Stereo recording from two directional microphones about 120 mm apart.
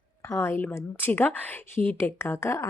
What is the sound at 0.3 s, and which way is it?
Speech, 20° left (ahead or behind).